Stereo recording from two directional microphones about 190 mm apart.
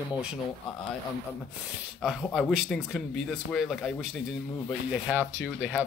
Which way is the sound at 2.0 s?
Centre (ahead or behind).